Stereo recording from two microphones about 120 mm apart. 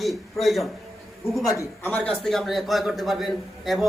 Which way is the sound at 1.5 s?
25° left (ahead or behind).